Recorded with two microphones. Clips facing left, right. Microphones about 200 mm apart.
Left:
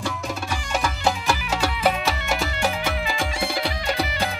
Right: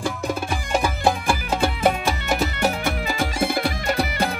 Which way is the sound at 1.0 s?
55° right (ahead or behind).